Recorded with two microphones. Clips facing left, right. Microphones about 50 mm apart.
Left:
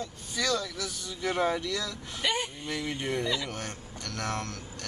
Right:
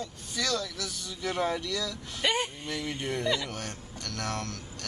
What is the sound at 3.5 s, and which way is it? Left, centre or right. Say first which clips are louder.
Speech: even; centre.